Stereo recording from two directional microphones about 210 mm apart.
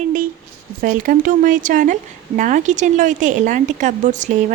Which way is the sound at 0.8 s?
40° right (ahead or behind).